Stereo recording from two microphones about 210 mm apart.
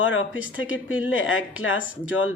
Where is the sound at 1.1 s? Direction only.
70° left (ahead or behind).